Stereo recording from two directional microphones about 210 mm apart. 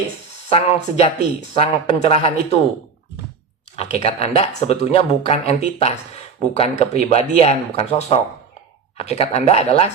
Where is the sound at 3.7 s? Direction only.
30° left (ahead or behind).